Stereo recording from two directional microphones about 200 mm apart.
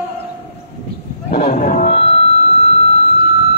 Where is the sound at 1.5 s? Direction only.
40° left (ahead or behind).